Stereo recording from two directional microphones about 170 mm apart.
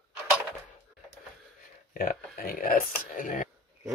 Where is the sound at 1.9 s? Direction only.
55° left (ahead or behind).